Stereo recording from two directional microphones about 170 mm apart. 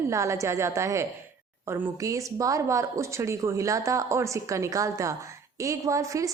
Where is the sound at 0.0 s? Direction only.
15° right (ahead or behind).